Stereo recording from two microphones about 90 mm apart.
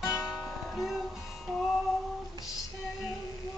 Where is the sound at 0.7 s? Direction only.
5° right (ahead or behind).